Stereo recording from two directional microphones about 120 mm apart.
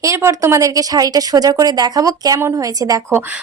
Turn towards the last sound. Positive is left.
turn(degrees=-30)  # may be behind; listen again after turning